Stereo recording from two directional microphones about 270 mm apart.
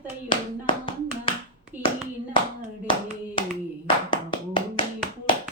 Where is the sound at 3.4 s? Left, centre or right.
Centre.